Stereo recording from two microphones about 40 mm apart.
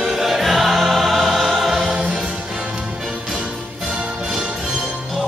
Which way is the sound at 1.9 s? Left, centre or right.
Right.